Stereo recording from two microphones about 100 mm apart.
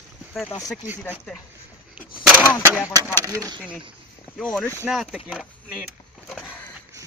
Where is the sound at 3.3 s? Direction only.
35° right (ahead or behind).